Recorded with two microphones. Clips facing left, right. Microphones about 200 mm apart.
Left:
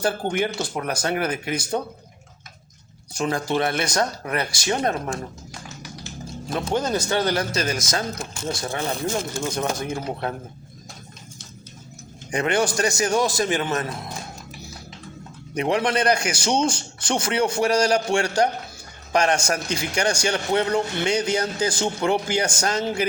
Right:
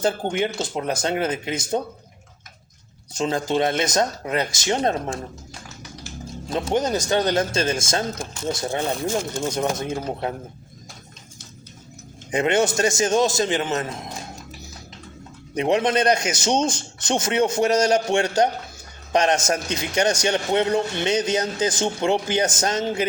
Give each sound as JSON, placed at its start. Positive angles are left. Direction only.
{"t": 0.0, "sound": "a man's voice", "side_deg": -20}
{"t": 3.1, "sound": "a man's voice", "side_deg": -20}
{"t": 6.5, "sound": "a man's voice", "side_deg": -20}
{"t": 12.3, "sound": "a man's voice", "side_deg": -20}
{"t": 15.5, "sound": "a man's voice", "side_deg": -20}